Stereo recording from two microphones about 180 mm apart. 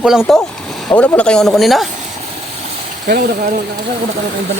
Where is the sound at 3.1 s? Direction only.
55° right (ahead or behind).